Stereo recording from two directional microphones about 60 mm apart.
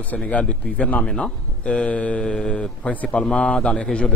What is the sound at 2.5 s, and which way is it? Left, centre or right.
A man's voice, centre.